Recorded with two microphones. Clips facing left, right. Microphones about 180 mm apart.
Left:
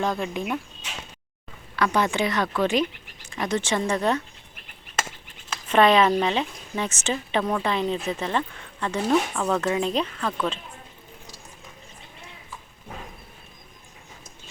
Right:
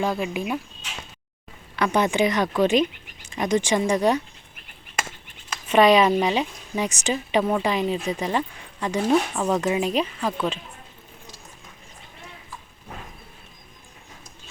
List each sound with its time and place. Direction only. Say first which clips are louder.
0.0 s a woman's voice: right 1 dB; 5° right (ahead or behind)
1.7 s a woman's voice: right 2 dB; 20° right (ahead or behind)
5.6 s a woman's voice: right 2 dB; 10° right (ahead or behind)